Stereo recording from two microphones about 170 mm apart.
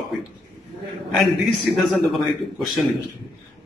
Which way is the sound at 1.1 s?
Centre (ahead or behind).